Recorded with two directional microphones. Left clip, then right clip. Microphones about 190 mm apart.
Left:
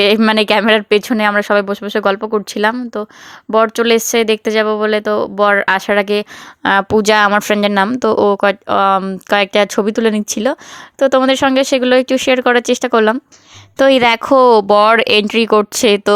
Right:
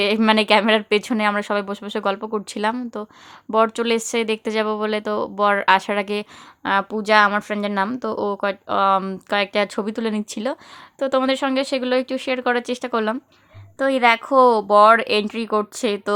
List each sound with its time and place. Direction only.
0.0 s a woman's voice: 30° left (ahead or behind)
6.6 s speech: 40° left (ahead or behind)